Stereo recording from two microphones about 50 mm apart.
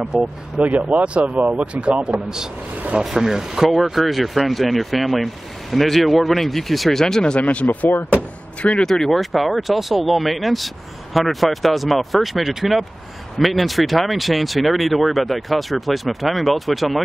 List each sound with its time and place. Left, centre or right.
0.1 s speech: centre
0.6 s speech: right
2.0 s speech: centre
7.4 s speech: left
8.7 s speech: centre